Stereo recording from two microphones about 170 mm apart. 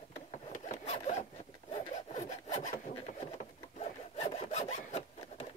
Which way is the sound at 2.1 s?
45° left (ahead or behind).